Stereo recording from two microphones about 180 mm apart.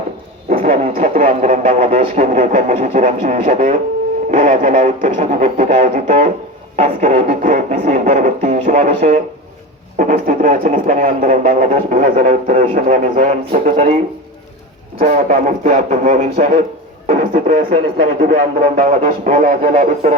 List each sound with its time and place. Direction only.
0.5 s didgeridoo: 50° right (ahead or behind)
0.9 s speech: 45° right (ahead or behind)